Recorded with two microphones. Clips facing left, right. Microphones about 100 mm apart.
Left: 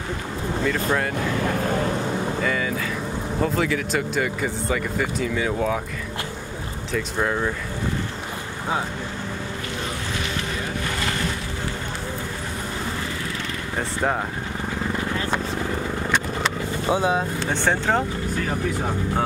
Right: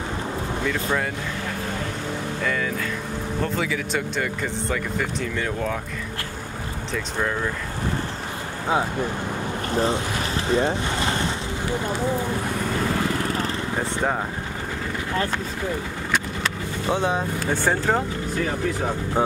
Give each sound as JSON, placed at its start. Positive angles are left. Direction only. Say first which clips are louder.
{"t": 0.7, "sound": "speech", "louder": "left 2 dB", "side_deg": 0}
{"t": 2.4, "sound": "speech", "louder": "left 1 dB", "side_deg": 0}
{"t": 10.5, "sound": "boat", "louder": "right 6 dB", "side_deg": -30}
{"t": 13.7, "sound": "speech", "louder": "left 2 dB", "side_deg": 0}
{"t": 16.9, "sound": "speech", "louder": "left 2 dB", "side_deg": 5}
{"t": 17.6, "sound": "speech", "louder": "left 1 dB", "side_deg": -5}